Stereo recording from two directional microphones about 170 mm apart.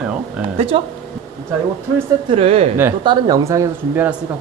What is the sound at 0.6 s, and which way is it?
Speech, 35° right (ahead or behind).